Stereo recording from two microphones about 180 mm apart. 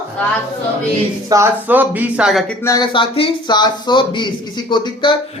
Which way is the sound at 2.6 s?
20° left (ahead or behind).